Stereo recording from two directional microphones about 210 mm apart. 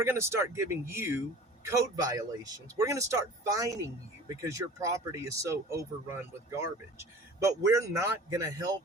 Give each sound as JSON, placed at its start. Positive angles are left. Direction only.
{"t": 0.0, "sound": "speech", "side_deg": -10}